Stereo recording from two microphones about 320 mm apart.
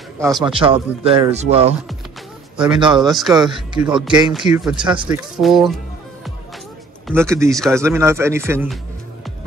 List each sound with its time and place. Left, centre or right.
0.2 s speech: centre
3.0 s speech: centre
3.3 s speech: centre
4.3 s speech: centre
4.7 s speech: centre
5.0 s speech: centre
7.1 s speech: centre